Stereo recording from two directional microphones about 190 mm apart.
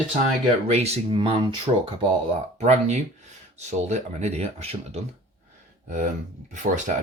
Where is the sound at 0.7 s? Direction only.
35° right (ahead or behind).